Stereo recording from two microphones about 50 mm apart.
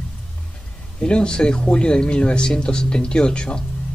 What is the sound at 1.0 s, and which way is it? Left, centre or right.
Speech, centre.